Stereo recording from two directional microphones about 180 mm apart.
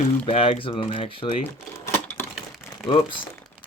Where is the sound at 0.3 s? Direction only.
30° left (ahead or behind).